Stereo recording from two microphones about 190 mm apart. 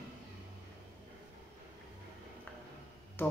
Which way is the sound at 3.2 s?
10° left (ahead or behind).